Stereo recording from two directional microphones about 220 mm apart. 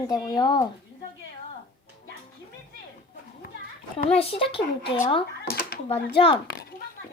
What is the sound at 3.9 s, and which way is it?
A child's voice, 25° left (ahead or behind).